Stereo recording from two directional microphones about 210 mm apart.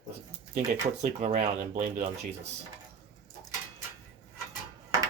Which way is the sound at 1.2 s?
35° right (ahead or behind).